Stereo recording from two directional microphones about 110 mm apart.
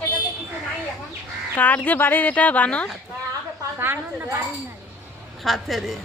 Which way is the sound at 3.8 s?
20° right (ahead or behind).